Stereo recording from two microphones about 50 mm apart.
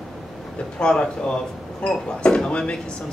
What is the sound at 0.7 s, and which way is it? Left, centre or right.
Speech, centre.